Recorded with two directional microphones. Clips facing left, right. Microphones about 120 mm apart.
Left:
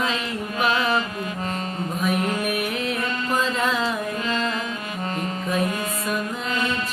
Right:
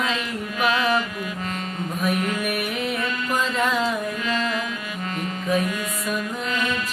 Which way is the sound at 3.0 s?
35° left (ahead or behind).